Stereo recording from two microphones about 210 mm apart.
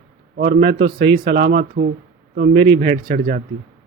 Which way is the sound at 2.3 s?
55° right (ahead or behind).